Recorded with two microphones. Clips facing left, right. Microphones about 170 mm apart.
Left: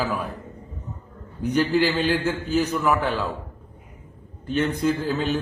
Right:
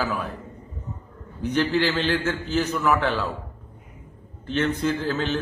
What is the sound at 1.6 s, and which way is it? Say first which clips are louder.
A man's voice: left 2 dB; 10° left (ahead or behind).